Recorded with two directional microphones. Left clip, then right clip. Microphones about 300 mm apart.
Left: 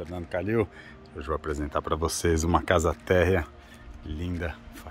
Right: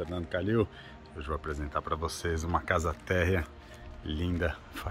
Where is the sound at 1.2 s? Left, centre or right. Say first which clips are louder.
Left 6 dB; left.